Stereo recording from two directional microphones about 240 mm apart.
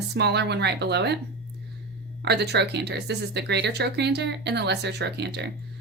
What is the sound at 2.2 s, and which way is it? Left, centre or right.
Speech, right.